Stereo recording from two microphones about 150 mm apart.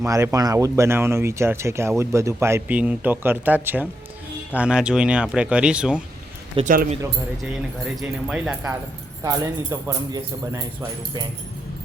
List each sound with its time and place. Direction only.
0.0 s speech: 20° right (ahead or behind)
6.6 s speech: 35° right (ahead or behind)
7.9 s speech: 5° right (ahead or behind)
9.2 s speech: 25° right (ahead or behind)